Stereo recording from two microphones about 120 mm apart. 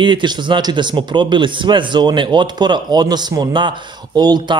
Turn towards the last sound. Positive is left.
turn(degrees=-35)  # may be behind; listen again after turning